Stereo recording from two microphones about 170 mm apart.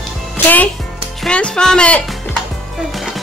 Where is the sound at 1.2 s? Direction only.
5° left (ahead or behind).